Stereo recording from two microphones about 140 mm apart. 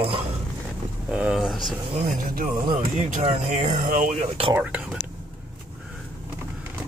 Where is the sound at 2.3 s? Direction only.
80° right.